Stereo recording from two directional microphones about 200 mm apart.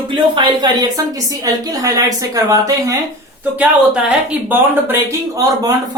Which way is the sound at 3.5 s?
5° right (ahead or behind).